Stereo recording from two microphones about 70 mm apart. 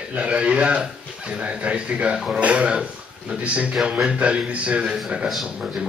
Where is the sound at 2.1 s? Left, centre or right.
Centre.